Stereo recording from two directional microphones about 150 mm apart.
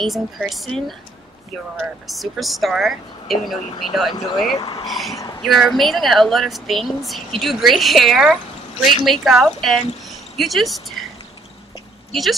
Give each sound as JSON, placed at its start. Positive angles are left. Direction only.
{"t": 0.0, "sound": "a woman's voice", "side_deg": 0}
{"t": 2.0, "sound": "a woman's voice", "side_deg": 0}
{"t": 4.6, "sound": "speech", "side_deg": 30}
{"t": 4.8, "sound": "a woman's voice", "side_deg": 0}
{"t": 12.1, "sound": "speech", "side_deg": 0}